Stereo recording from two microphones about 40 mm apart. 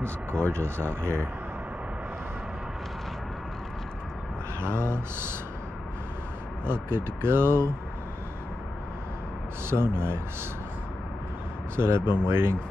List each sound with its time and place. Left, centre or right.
0.0 s speech: right
4.7 s speech: right
6.6 s speech: right
9.7 s speech: right
11.7 s speech: right